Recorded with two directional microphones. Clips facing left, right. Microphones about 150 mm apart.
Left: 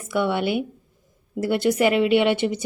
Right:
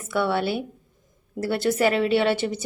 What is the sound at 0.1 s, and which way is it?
A woman's voice, 15° left (ahead or behind).